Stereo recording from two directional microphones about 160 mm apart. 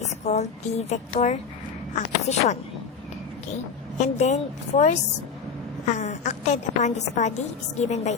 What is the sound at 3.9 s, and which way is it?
A woman's voice, 45° left (ahead or behind).